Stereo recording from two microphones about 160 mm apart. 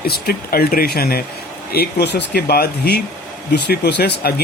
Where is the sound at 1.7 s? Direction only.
80° left.